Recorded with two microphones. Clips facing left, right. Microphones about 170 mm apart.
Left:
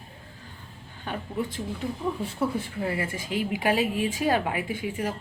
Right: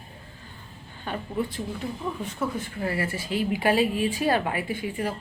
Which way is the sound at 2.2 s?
30° left (ahead or behind).